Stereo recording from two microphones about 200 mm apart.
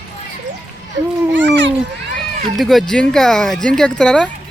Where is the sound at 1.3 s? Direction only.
65° right (ahead or behind).